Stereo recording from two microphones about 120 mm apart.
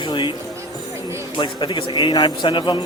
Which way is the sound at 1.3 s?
40° left (ahead or behind).